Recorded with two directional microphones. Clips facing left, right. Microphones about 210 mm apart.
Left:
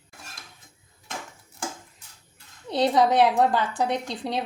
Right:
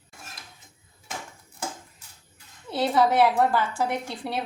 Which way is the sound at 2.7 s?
15° left (ahead or behind).